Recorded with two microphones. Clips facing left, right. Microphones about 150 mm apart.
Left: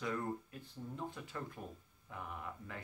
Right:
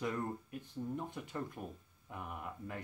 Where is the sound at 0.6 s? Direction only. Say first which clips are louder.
Right 6 dB; 15° right (ahead or behind).